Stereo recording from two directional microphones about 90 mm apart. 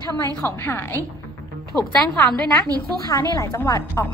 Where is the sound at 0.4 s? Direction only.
25° left (ahead or behind).